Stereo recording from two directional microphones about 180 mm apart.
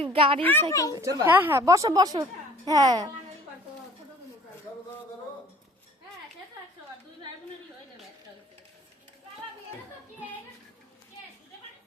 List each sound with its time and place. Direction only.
0.0 s a child's voice: 30° right (ahead or behind)
0.7 s speech: 20° left (ahead or behind)
0.9 s a child's voice: 20° right (ahead or behind)